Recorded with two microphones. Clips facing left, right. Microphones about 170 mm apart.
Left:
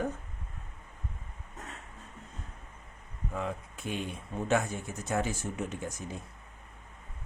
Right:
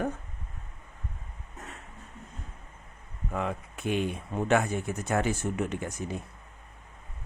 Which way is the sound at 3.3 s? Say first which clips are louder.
Right 4 dB; 65° right (ahead or behind).